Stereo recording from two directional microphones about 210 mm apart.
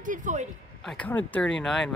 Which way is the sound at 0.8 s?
5° left (ahead or behind).